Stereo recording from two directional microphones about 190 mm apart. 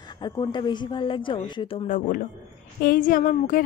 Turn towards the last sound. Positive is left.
turn(degrees=45)  # may be behind; listen again after turning